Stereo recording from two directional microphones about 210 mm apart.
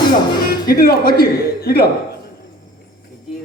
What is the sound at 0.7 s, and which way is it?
Speech, 45° left (ahead or behind).